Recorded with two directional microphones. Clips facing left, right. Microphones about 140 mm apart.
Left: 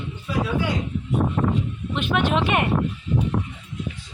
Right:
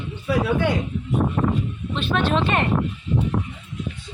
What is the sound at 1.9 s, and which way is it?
Speech, 15° left (ahead or behind).